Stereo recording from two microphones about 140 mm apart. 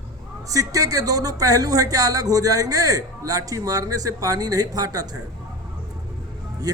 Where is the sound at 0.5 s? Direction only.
25° right (ahead or behind).